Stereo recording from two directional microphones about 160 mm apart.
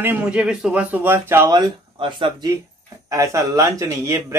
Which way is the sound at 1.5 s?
30° right (ahead or behind).